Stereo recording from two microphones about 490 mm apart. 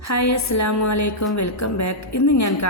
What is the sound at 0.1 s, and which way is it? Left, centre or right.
A woman's voice, left.